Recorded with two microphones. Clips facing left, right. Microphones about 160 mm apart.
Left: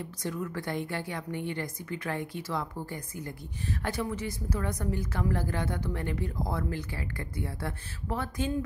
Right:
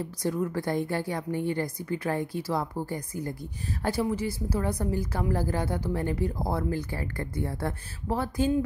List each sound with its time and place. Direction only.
0.0 s a woman's voice: 35° right (ahead or behind)